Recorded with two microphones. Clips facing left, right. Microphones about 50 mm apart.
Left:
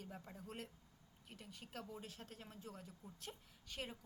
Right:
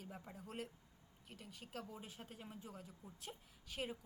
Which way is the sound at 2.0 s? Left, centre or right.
Centre.